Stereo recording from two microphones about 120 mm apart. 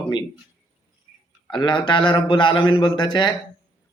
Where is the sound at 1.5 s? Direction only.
40° left (ahead or behind).